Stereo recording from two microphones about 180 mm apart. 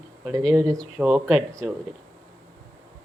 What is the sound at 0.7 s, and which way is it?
A woman's voice, centre (ahead or behind).